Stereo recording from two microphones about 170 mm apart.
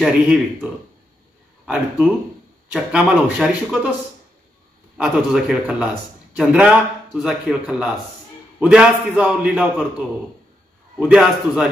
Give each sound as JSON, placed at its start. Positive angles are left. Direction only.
{"t": 0.0, "sound": "a man's voice", "side_deg": -5}
{"t": 2.7, "sound": "a man's voice", "side_deg": -5}
{"t": 4.9, "sound": "a man's voice", "side_deg": -5}